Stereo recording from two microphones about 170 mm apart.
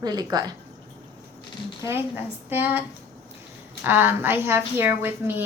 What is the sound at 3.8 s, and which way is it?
A woman's voice, 10° right (ahead or behind).